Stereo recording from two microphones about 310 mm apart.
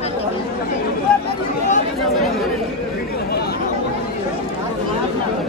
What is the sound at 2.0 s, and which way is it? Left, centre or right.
Chatter, centre.